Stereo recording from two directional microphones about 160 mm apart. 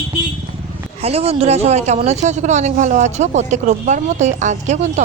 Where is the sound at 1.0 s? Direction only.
40° right (ahead or behind).